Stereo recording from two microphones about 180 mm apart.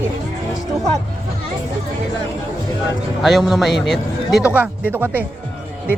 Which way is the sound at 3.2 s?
Centre (ahead or behind).